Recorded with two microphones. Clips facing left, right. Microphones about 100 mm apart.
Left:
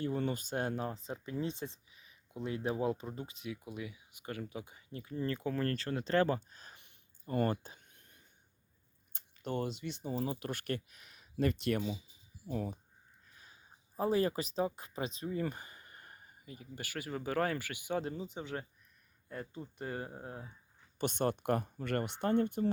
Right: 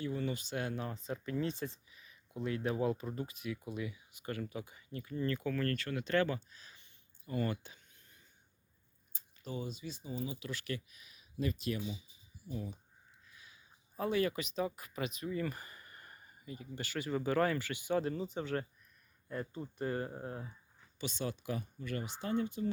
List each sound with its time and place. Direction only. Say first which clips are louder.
0.0 s speech: left 2 dB; 45° left (ahead or behind)
0.9 s speech: right 1 dB; 25° left (ahead or behind); by 8.2 s 55° left (ahead or behind)
9.1 s speech: left 5 dB; 65° left (ahead or behind)
13.3 s speech: left 2 dB; 40° left (ahead or behind)
15.4 s a sound: left 1 dB; 20° left (ahead or behind)
16.5 s speech: right 3 dB; 10° left (ahead or behind)
19.8 s speech: right 4 dB; 20° left (ahead or behind)
21.0 s speech: left 6 dB; 55° left (ahead or behind)